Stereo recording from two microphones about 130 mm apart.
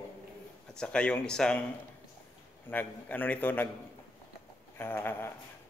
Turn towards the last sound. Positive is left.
turn(degrees=15)  # may be behind; listen again after turning